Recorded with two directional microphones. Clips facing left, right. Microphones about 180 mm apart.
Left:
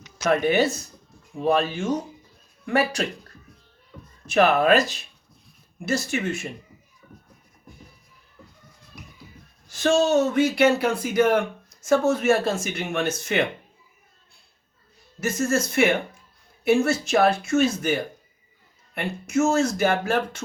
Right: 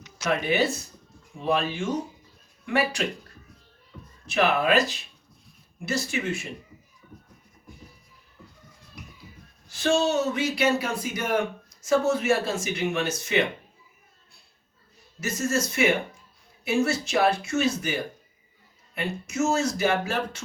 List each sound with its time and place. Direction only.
0.2 s speech: 45° left (ahead or behind)
4.3 s speech: 45° left (ahead or behind)
9.7 s speech: 45° left (ahead or behind)
15.2 s speech: 55° left (ahead or behind)
18.9 s speech: 50° left (ahead or behind)